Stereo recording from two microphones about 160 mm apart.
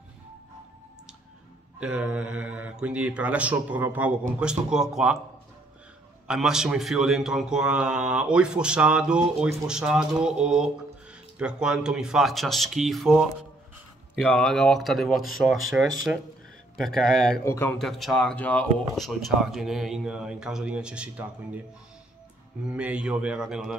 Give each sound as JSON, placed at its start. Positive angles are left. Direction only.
{"t": 1.8, "sound": "a man's voice", "side_deg": -5}
{"t": 6.2, "sound": "a man's voice", "side_deg": -5}
{"t": 17.5, "sound": "a man's voice", "side_deg": 15}
{"t": 17.7, "sound": "a man's voice", "side_deg": 0}
{"t": 22.7, "sound": "a man's voice", "side_deg": -5}